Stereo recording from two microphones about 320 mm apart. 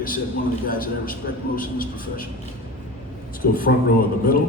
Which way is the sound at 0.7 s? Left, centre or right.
Left.